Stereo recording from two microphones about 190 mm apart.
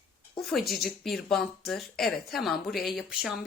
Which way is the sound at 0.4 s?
Centre (ahead or behind).